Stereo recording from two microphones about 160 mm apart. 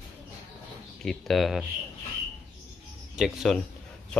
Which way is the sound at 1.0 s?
Centre (ahead or behind).